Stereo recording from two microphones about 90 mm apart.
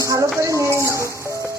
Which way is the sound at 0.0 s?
35° right (ahead or behind).